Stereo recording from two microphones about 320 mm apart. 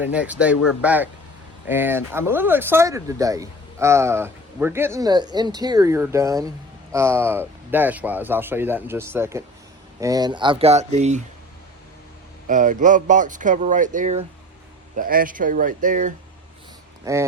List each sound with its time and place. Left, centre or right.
0.0 s speech: centre; by 11.2 s right
12.5 s speech: right
17.0 s speech: centre